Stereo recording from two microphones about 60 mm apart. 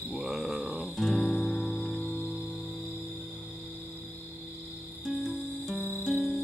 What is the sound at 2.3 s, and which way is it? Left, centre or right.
Music, centre.